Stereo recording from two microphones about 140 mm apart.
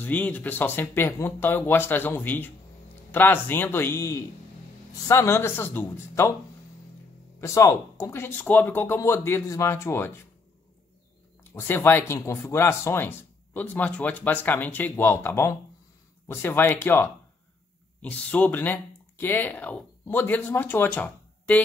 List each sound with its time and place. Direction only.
0.0 s a man's voice: 10° left (ahead or behind)
7.3 s speech: 20° left (ahead or behind)
11.5 s speech: 15° left (ahead or behind)